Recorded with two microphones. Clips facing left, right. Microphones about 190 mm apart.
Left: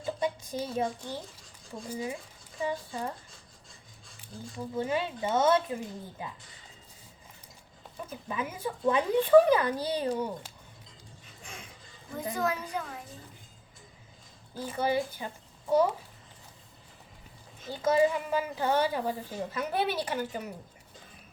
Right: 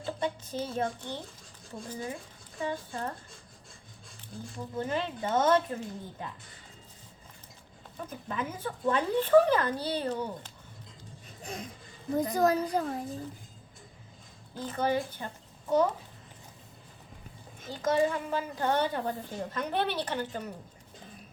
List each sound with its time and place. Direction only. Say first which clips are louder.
0.0 s a woman's voice: left 1 dB; 10° left (ahead or behind)
4.2 s a woman's voice: left 1 dB; 10° left (ahead or behind)
8.0 s a woman's voice: even; 10° left (ahead or behind)
11.4 s a woman's voice: right 8 dB; 40° right (ahead or behind)
14.5 s a woman's voice: even; 10° left (ahead or behind)
17.7 s a woman's voice: left 2 dB; 10° left (ahead or behind)